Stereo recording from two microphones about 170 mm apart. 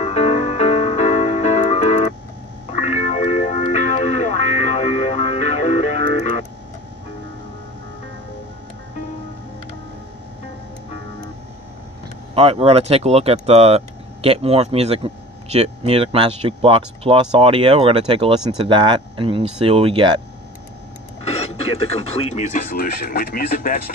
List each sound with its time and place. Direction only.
0.0 s music: 40° left (ahead or behind)
12.4 s speech: 35° right (ahead or behind)
21.2 s speech: 35° left (ahead or behind)
22.8 s speech: 65° left (ahead or behind)